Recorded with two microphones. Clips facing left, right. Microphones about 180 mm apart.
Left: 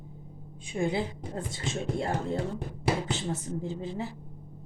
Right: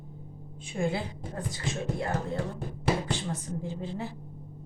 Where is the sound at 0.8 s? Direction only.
20° left (ahead or behind).